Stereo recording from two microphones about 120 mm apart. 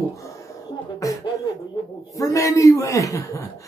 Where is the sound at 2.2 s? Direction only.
25° left (ahead or behind).